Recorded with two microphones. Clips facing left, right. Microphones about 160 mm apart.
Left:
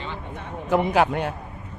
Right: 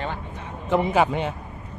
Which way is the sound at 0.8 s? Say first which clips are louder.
Even; centre (ahead or behind).